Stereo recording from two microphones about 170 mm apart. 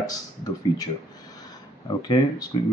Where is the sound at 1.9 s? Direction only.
25° left (ahead or behind).